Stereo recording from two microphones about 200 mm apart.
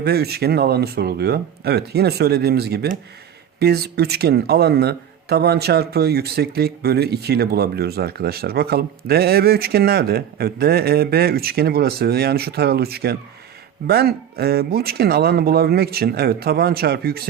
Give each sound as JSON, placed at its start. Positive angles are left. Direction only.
{"t": 0.0, "sound": "speech", "side_deg": -55}